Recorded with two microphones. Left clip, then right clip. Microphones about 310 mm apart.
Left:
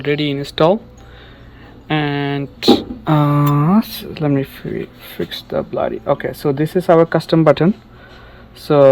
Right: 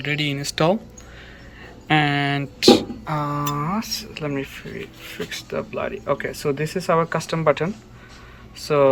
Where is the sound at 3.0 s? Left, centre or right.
Left.